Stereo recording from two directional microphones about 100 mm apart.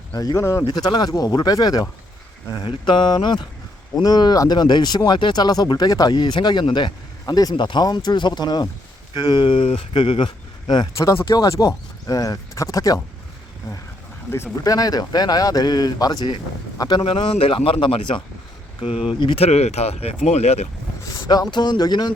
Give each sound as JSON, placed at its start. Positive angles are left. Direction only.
{"t": 0.1, "sound": "speech", "side_deg": 35}
{"t": 0.7, "sound": "speech", "side_deg": 45}
{"t": 2.6, "sound": "speech", "side_deg": 55}
{"t": 10.9, "sound": "speech", "side_deg": 30}
{"t": 14.3, "sound": "speech", "side_deg": 25}
{"t": 14.6, "sound": "speech", "side_deg": 40}
{"t": 17.0, "sound": "speech", "side_deg": 60}
{"t": 18.8, "sound": "speech", "side_deg": 70}
{"t": 19.4, "sound": "speech", "side_deg": 90}
{"t": 21.0, "sound": "speech", "side_deg": 40}